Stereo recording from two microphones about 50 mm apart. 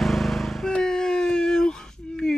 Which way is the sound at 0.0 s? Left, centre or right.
Centre.